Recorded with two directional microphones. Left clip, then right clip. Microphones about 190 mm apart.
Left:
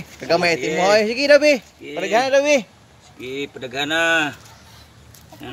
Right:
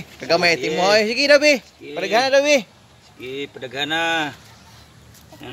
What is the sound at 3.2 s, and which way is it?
Speech, 40° left (ahead or behind).